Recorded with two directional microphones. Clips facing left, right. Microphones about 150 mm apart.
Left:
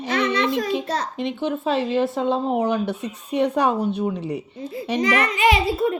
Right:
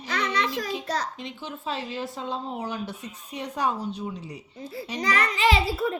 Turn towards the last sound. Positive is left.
turn(degrees=20)  # may be behind; listen again after turning